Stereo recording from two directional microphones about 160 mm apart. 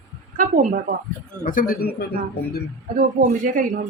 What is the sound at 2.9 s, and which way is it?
Speech, 60° right (ahead or behind).